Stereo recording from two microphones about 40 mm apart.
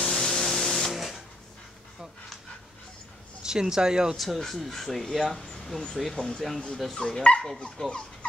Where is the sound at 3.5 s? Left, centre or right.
Centre.